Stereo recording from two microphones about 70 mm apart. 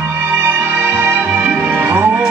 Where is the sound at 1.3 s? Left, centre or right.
Centre.